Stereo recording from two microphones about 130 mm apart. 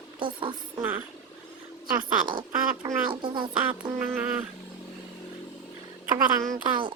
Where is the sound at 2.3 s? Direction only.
40° right (ahead or behind).